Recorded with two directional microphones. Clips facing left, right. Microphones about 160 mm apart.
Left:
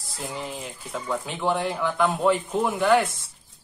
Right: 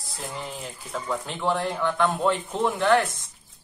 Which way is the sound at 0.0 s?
Centre (ahead or behind).